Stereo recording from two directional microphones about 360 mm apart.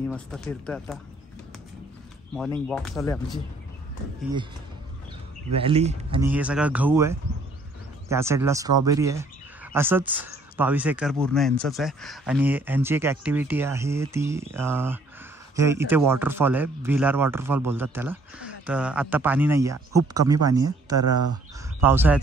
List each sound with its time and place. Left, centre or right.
0.1 s speech: centre
2.7 s speech: centre
5.6 s speech: centre
6.2 s speech: centre
21.0 s speech: right
21.8 s speech: centre